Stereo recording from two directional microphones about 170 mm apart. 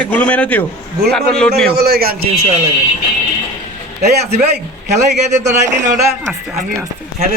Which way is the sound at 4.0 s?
70° right (ahead or behind).